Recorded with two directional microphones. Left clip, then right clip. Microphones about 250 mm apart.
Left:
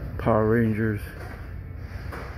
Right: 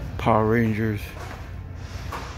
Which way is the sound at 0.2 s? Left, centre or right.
Centre.